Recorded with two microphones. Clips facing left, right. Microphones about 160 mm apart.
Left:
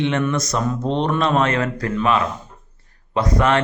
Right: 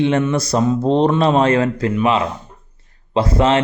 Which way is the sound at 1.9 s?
20° right (ahead or behind).